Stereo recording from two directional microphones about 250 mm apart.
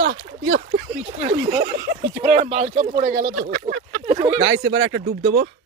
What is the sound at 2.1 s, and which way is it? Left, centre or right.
Speech, right.